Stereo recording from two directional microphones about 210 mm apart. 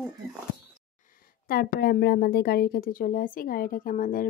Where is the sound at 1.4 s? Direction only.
45° left (ahead or behind).